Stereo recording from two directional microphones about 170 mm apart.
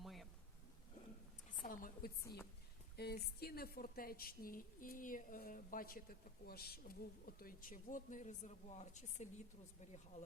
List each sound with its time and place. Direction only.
0.0 s a sound: centre (ahead or behind)
1.6 s a woman's voice: 55° left (ahead or behind)
2.2 s a woman's voice: 15° left (ahead or behind)
2.9 s a woman's voice: 70° left (ahead or behind); by 10.2 s 40° left (ahead or behind)